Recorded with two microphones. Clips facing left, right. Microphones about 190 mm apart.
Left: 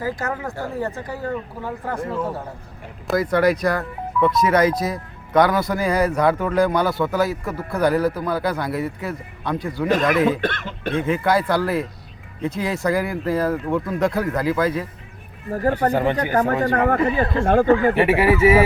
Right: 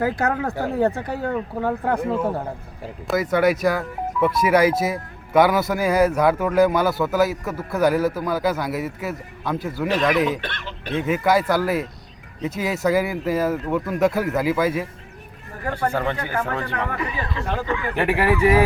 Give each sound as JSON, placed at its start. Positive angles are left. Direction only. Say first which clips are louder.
{"t": 0.0, "sound": "speech", "louder": "right 4 dB", "side_deg": -65}
{"t": 3.1, "sound": "speech", "louder": "left 1 dB", "side_deg": 0}
{"t": 10.4, "sound": "speech", "louder": "left 8 dB", "side_deg": 50}
{"t": 11.0, "sound": "speech", "louder": "right 1 dB", "side_deg": -5}
{"t": 15.9, "sound": "speech", "louder": "left 4 dB", "side_deg": 20}
{"t": 16.3, "sound": "speech", "louder": "left 7 dB", "side_deg": 40}
{"t": 17.9, "sound": "speech", "louder": "left 3 dB", "side_deg": 5}